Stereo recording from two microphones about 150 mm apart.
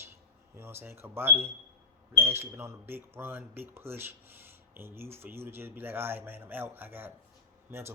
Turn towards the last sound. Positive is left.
turn(degrees=-15)  # may be behind; listen again after turning